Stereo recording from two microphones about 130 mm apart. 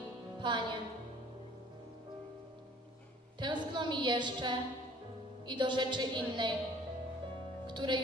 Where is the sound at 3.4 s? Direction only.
35° right (ahead or behind).